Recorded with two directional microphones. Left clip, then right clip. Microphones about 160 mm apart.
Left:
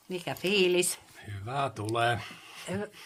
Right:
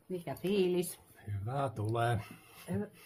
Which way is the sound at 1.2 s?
5° right (ahead or behind).